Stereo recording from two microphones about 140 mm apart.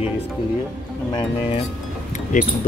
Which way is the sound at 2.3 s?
65° left (ahead or behind).